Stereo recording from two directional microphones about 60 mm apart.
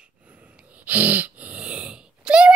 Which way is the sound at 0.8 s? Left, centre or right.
Right.